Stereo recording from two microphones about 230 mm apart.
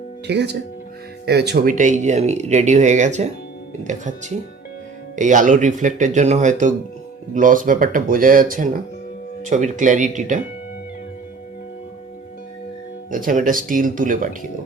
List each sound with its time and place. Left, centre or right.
0.3 s speech: right
13.1 s speech: right